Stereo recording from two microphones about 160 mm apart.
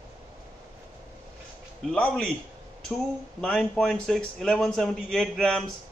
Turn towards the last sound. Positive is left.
turn(degrees=5)  # may be behind; listen again after turning